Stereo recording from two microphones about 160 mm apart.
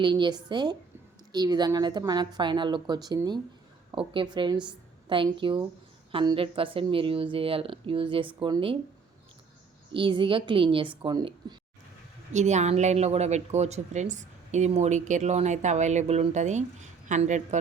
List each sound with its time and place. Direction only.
0.0 s a woman's voice: 30° right (ahead or behind)
9.9 s a woman's voice: 30° right (ahead or behind)
12.3 s speech: 45° right (ahead or behind)